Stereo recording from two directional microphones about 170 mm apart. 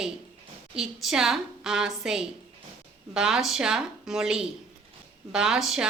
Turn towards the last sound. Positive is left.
turn(degrees=-5)  # may be behind; listen again after turning